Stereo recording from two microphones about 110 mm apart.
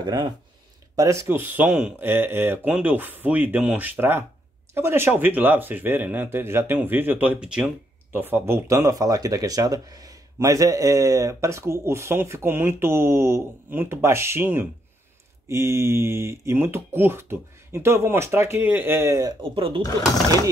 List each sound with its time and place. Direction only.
0.0 s speech: 40° right (ahead or behind)
0.9 s speech: 30° right (ahead or behind); by 7.7 s 10° right (ahead or behind)
8.1 s speech: 20° right (ahead or behind)
19.5 s speech: 55° right (ahead or behind)